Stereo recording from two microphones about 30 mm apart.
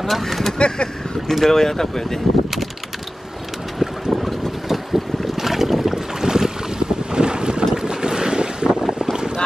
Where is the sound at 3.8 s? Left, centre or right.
Right.